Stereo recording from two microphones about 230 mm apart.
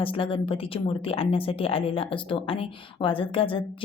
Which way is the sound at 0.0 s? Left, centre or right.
Left.